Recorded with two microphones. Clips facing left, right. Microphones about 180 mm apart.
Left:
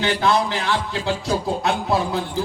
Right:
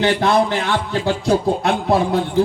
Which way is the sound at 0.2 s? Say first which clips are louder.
Right 4 dB; 45° right (ahead or behind).